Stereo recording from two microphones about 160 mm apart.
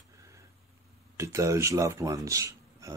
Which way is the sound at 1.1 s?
20° right (ahead or behind).